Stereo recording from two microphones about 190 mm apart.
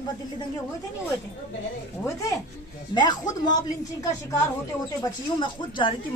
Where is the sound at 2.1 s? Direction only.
15° left (ahead or behind).